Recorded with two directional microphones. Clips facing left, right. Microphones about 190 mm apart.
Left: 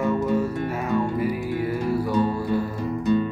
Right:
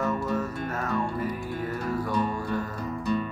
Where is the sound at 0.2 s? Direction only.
10° left (ahead or behind).